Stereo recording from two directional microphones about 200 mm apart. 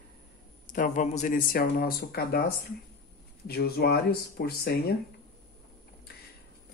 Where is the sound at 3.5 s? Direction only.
50° left (ahead or behind).